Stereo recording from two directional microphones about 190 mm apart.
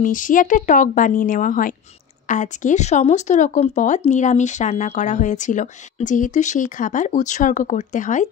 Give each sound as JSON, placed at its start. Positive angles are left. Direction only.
{"t": 0.0, "sound": "a woman's voice", "side_deg": 45}